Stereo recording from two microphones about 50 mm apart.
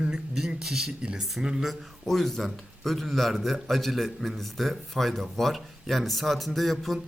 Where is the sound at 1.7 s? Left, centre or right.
Centre.